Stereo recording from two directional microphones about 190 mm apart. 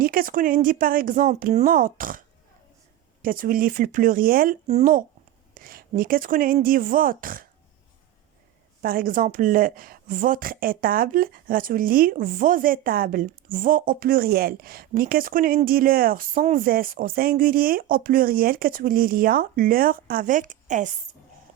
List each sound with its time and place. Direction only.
0.0 s a woman's voice: 50° right (ahead or behind)
4.6 s speech: 35° right (ahead or behind)
5.5 s a sound: 50° right (ahead or behind)
6.0 s a woman's voice: 50° right (ahead or behind)
8.8 s a woman's voice: 50° right (ahead or behind)